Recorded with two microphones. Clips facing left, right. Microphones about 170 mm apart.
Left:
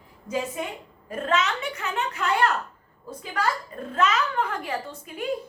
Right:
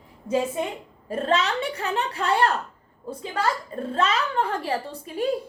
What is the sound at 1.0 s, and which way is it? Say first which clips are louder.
A woman's voice: right 2 dB; 30° right (ahead or behind).